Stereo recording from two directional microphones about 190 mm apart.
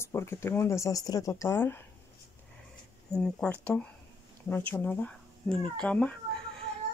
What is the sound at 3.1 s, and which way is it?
Speech, 5° left (ahead or behind).